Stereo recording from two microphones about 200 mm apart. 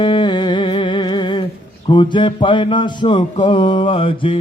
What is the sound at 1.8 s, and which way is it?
Music, 25° left (ahead or behind).